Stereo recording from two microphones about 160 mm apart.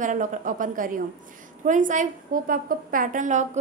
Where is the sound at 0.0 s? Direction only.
55° right (ahead or behind).